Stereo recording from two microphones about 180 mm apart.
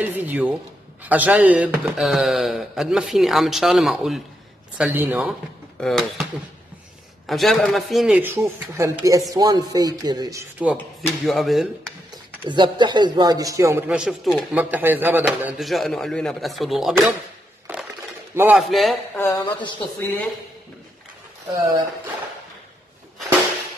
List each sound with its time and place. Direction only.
0.0 s speech: 10° right (ahead or behind)
5.8 s speech: centre (ahead or behind)
7.2 s speech: centre (ahead or behind); by 10.4 s 20° right (ahead or behind)
10.6 s speech: 5° right (ahead or behind)
12.4 s speech: 25° right (ahead or behind); by 17.1 s centre (ahead or behind)
18.3 s a man's voice: 10° right (ahead or behind)
18.6 s speech: centre (ahead or behind)
19.1 s speech: 20° left (ahead or behind)